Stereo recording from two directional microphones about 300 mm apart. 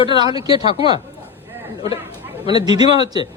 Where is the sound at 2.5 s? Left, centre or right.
Centre.